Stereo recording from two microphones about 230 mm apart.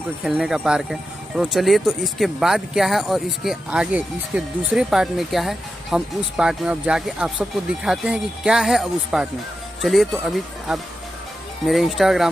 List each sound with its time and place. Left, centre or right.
0.2 s speech: centre